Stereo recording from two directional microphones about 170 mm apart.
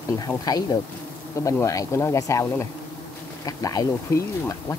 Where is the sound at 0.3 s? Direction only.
20° left (ahead or behind).